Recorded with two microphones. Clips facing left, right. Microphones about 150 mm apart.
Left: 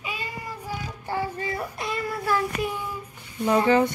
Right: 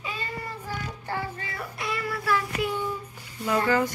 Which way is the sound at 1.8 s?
25° left (ahead or behind).